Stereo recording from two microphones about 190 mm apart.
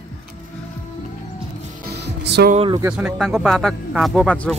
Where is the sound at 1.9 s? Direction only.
60° right (ahead or behind).